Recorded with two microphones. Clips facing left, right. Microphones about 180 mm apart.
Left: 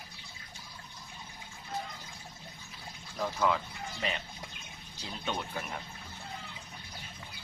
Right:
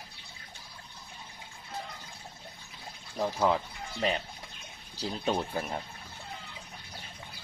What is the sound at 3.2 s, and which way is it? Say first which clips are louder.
Speech: right 3 dB; 30° right (ahead or behind).